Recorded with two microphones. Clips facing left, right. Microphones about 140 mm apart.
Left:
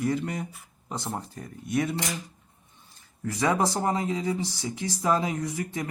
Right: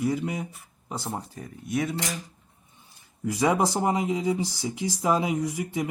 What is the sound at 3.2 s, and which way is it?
Speech, 15° right (ahead or behind).